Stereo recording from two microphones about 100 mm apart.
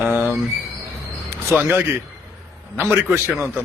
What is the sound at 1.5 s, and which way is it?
A man's voice, 20° right (ahead or behind).